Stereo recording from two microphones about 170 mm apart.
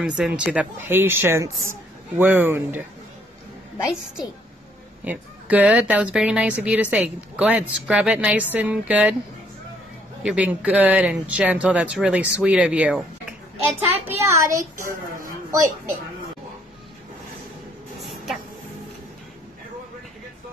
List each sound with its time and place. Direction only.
0.0 s a woman's voice: 5° right (ahead or behind)
5.0 s a woman's voice: 10° right (ahead or behind)
10.2 s a woman's voice: 5° right (ahead or behind)